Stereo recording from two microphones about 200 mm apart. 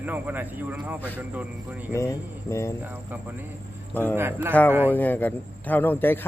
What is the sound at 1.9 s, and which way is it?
Speech, 15° left (ahead or behind).